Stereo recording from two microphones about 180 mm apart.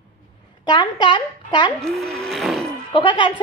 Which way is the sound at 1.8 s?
Centre (ahead or behind).